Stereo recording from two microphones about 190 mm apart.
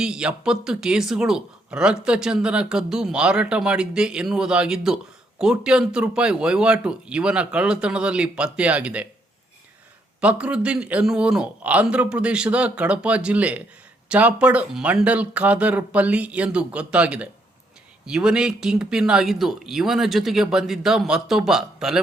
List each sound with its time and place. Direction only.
0.0 s speech: 5° right (ahead or behind)
10.2 s a man's voice: 5° right (ahead or behind)